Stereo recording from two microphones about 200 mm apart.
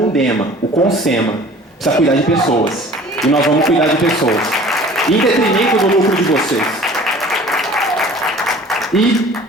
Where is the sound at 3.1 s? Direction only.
Centre (ahead or behind).